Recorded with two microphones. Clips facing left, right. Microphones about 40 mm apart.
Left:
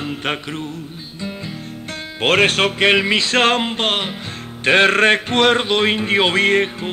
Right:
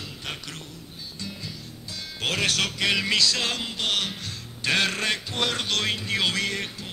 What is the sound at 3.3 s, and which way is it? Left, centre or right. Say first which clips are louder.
Music: left 13 dB; left.